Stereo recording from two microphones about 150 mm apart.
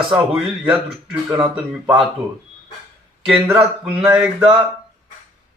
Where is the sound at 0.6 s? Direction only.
10° right (ahead or behind).